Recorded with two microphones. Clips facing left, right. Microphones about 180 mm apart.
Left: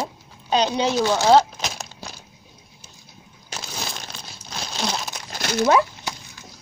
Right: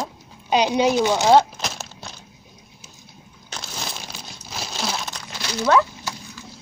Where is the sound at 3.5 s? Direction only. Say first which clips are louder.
Left 1 dB; 10° left (ahead or behind).